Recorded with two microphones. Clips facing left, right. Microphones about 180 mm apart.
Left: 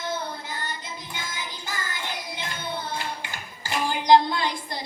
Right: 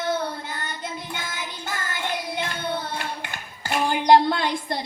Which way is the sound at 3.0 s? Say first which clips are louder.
Right 1 dB; 60° right (ahead or behind).